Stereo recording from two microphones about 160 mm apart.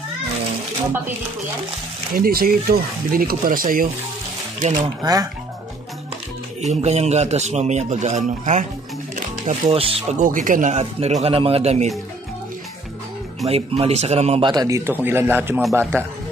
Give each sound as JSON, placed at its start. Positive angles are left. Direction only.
{"t": 2.1, "sound": "speech", "side_deg": -65}
{"t": 4.6, "sound": "speech", "side_deg": -45}
{"t": 5.0, "sound": "speech", "side_deg": -25}
{"t": 6.6, "sound": "speech", "side_deg": -45}
{"t": 13.5, "sound": "speech", "side_deg": -35}
{"t": 14.4, "sound": "speech", "side_deg": -25}